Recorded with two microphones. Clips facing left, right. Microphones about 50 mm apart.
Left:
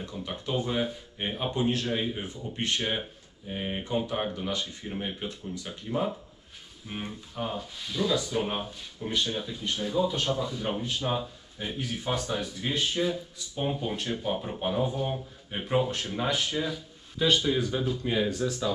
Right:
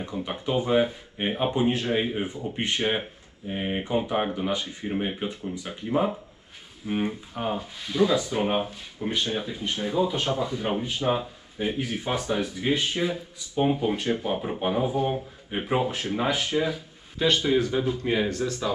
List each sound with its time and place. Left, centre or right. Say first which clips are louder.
0.0 s speech: right 5 dB; right